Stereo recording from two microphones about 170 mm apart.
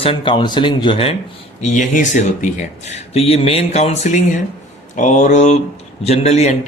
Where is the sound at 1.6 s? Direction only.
45° left (ahead or behind).